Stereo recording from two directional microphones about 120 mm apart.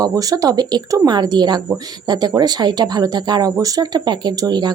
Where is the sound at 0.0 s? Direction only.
30° right (ahead or behind).